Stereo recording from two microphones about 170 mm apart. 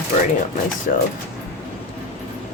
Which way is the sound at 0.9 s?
55° left (ahead or behind).